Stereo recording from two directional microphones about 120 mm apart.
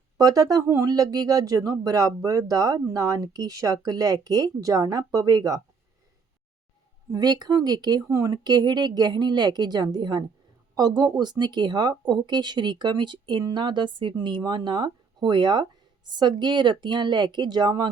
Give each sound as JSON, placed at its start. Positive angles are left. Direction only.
{"t": 0.2, "sound": "speech", "side_deg": -30}
{"t": 7.1, "sound": "speech", "side_deg": -35}